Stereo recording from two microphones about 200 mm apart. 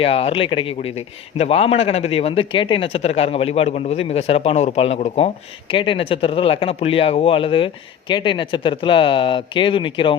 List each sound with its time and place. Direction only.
0.0 s a man's voice: 30° left (ahead or behind)